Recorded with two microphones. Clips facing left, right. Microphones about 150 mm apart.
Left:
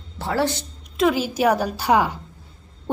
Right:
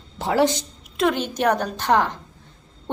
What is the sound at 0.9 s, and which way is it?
A woman's voice, 5° left (ahead or behind).